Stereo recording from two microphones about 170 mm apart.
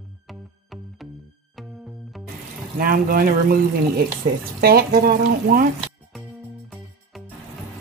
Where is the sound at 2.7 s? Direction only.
60° right (ahead or behind).